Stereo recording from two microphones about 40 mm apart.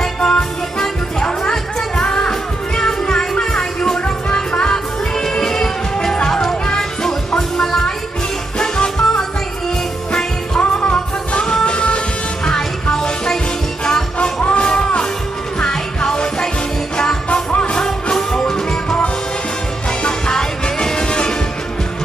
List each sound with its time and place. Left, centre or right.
0.0 s music: centre
10.6 s music: left
14.1 s music: left
17.3 s music: left
18.1 s music: centre